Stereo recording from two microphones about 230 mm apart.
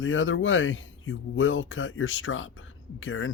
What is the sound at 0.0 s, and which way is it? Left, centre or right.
Speech, left.